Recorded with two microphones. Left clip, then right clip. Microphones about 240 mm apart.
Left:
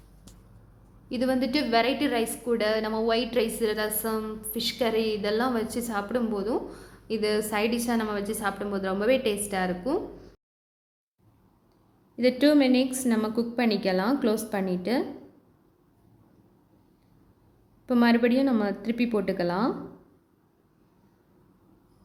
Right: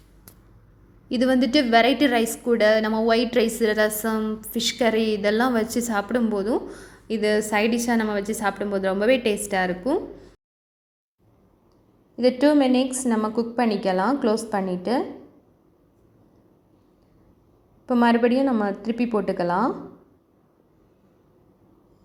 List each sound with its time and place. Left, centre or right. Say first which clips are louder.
1.0 s a woman's voice: right 6 dB; right
12.1 s a woman's voice: right 3 dB; centre
17.8 s a woman's voice: right 4 dB; centre